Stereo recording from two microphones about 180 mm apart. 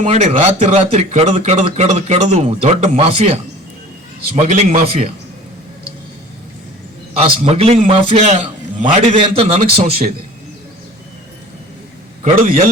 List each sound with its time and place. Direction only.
0.0 s speech: 35° right (ahead or behind)
4.4 s speech: 40° right (ahead or behind)
7.2 s speech: 30° right (ahead or behind)
12.2 s a man's voice: 45° right (ahead or behind)